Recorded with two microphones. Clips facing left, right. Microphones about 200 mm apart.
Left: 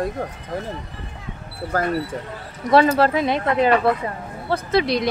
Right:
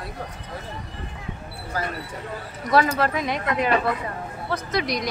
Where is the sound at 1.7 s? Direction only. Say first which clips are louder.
Left 7 dB; 50° left (ahead or behind).